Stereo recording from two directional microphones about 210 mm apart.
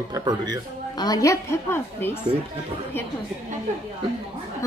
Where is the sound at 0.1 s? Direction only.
20° right (ahead or behind).